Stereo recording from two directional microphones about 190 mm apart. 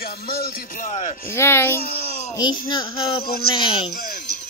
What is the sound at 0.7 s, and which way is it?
Speech, 40° left (ahead or behind).